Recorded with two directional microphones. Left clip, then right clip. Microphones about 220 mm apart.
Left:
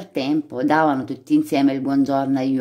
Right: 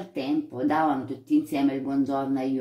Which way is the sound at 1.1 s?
45° left (ahead or behind).